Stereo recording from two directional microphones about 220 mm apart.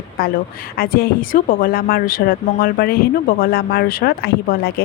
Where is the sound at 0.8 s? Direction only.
40° left (ahead or behind).